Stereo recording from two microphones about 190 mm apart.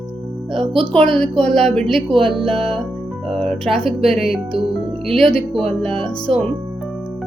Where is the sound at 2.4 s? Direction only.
30° right (ahead or behind).